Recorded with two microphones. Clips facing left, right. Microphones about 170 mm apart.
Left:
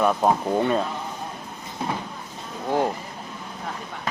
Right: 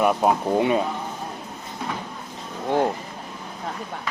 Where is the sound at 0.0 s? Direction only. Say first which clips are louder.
Right 1 dB; 10° right (ahead or behind).